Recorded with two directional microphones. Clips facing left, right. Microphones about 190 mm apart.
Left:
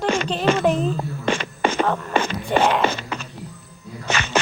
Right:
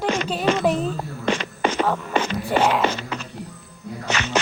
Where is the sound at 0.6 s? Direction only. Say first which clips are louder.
Left 1 dB; centre (ahead or behind).